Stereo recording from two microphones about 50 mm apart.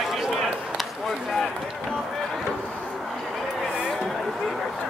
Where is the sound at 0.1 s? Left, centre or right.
Centre.